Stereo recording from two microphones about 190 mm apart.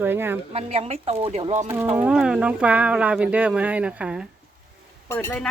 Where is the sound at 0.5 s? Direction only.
30° right (ahead or behind).